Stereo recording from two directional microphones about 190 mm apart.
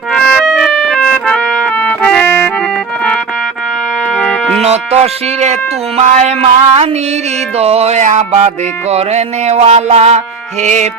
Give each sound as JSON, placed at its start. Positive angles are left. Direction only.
{"t": 0.1, "sound": "music", "side_deg": 5}
{"t": 4.1, "sound": "music", "side_deg": 0}
{"t": 4.5, "sound": "music", "side_deg": -35}